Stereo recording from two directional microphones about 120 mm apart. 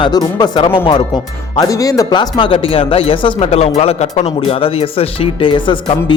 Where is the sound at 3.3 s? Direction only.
55° left (ahead or behind).